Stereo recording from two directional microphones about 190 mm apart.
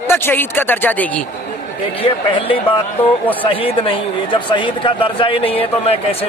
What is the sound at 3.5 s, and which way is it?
A man's voice, 25° left (ahead or behind).